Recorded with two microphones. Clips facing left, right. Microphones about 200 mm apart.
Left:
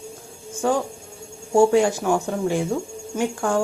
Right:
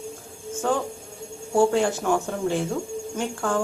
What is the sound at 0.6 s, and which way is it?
Speech, 10° left (ahead or behind).